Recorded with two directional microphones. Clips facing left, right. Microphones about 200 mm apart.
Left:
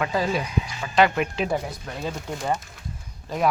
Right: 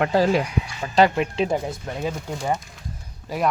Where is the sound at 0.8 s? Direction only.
35° right (ahead or behind).